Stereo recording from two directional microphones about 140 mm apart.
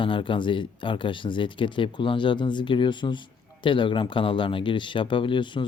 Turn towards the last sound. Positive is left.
turn(degrees=35)  # may be behind; listen again after turning